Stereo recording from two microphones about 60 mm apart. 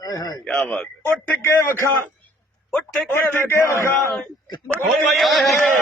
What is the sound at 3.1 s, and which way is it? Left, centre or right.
Speech, left.